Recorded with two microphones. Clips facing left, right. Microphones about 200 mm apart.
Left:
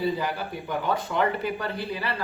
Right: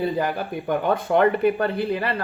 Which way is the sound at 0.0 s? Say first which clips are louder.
Right 3 dB; 55° right (ahead or behind).